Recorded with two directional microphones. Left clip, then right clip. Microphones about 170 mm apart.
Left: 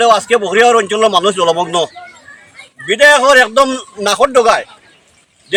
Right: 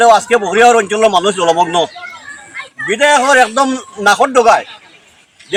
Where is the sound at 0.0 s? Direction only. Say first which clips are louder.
Right 2 dB; 25° left (ahead or behind).